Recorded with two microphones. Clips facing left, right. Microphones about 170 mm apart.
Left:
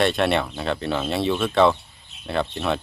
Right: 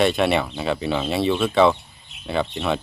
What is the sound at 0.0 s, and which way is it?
Speech, centre (ahead or behind).